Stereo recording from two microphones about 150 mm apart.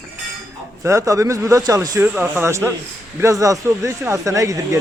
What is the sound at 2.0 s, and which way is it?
Speech, 15° right (ahead or behind).